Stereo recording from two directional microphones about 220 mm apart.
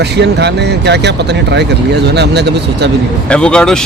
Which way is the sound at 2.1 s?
50° right (ahead or behind).